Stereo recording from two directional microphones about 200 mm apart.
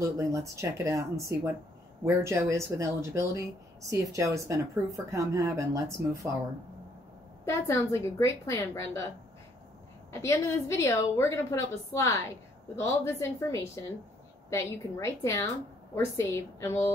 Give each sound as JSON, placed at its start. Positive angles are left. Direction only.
{"t": 0.0, "sound": "speech", "side_deg": -15}
{"t": 7.4, "sound": "a woman's voice", "side_deg": 15}
{"t": 10.1, "sound": "a woman's voice", "side_deg": 15}